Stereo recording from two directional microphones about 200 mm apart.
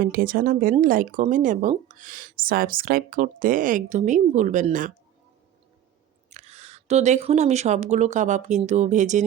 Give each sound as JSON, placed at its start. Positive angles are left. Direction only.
{"t": 0.0, "sound": "speech", "side_deg": -45}
{"t": 6.3, "sound": "speech", "side_deg": -30}